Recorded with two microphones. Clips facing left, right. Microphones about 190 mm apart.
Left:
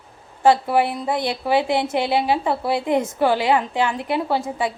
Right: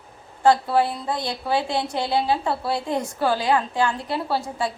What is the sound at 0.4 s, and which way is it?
A woman's voice, 20° left (ahead or behind).